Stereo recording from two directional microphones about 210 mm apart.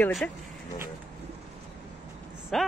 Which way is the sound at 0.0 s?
Centre (ahead or behind).